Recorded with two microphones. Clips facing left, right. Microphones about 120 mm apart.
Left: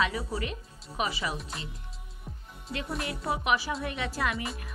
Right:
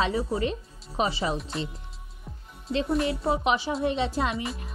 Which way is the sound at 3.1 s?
25° right (ahead or behind).